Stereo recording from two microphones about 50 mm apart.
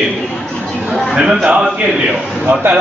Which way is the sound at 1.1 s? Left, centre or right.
Centre.